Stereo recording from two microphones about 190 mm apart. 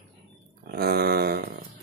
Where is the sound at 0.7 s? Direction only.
55° right (ahead or behind).